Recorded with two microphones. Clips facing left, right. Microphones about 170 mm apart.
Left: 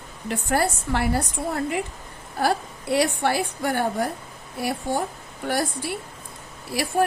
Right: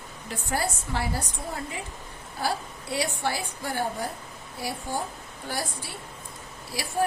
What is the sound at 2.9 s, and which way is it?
Speech, 65° left (ahead or behind).